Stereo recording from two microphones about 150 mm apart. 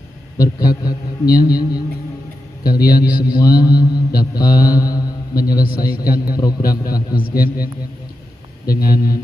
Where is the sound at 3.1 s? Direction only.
10° right (ahead or behind).